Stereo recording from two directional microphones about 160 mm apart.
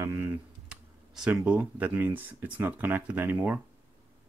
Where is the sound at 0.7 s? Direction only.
5° right (ahead or behind).